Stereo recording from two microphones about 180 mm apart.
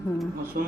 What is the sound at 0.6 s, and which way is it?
Speech, 55° right (ahead or behind).